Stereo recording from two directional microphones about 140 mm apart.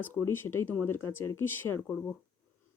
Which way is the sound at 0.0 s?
15° left (ahead or behind).